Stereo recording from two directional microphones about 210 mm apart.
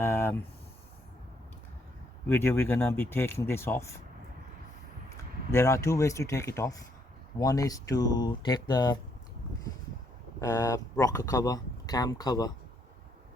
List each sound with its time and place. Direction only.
0.0 s a sound: 10° left (ahead or behind)
2.2 s speech: 10° left (ahead or behind)
5.5 s speech: 15° left (ahead or behind)
10.4 s speech: 15° left (ahead or behind)